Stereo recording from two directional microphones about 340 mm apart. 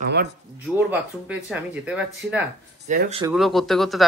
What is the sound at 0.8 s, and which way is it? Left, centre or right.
Speech, centre.